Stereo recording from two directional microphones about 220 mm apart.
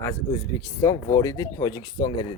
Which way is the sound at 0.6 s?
15° left (ahead or behind).